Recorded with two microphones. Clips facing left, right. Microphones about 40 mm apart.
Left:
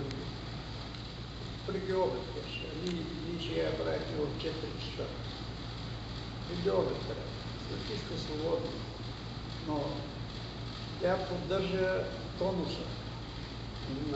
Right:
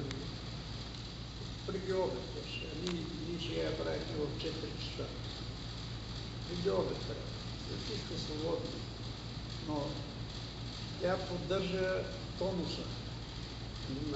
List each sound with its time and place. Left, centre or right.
1.7 s a man's voice: centre
3.3 s a man's voice: centre
6.5 s a man's voice: centre
11.0 s a man's voice: centre